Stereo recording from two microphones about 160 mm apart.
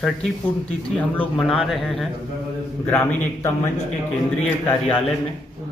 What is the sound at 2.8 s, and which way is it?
Speech, 10° left (ahead or behind).